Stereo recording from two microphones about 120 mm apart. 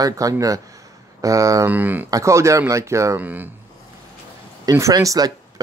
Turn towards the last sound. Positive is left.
turn(degrees=-30)  # may be behind; listen again after turning